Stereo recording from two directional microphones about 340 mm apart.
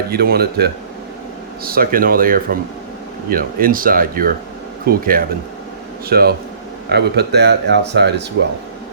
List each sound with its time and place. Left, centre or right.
0.1 s speech: right